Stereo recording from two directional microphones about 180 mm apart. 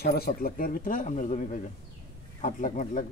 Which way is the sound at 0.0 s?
60° left (ahead or behind).